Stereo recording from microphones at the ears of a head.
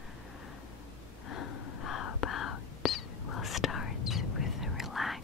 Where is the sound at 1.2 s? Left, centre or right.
Left.